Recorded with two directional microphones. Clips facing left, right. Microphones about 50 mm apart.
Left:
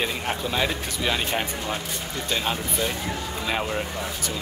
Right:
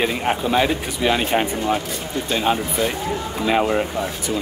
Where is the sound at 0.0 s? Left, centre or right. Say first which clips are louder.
Right 6 dB; right.